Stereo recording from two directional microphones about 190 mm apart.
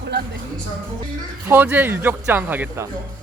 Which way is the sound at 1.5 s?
10° right (ahead or behind).